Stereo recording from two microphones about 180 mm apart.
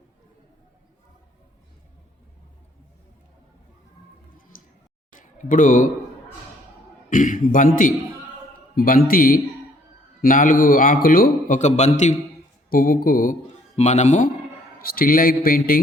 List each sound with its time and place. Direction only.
4.5 s a sound: 50° left (ahead or behind)
7.1 s a man's voice: 45° left (ahead or behind)
12.7 s a man's voice: 50° left (ahead or behind)
13.7 s speech: 40° left (ahead or behind)
14.8 s a man's voice: 55° left (ahead or behind)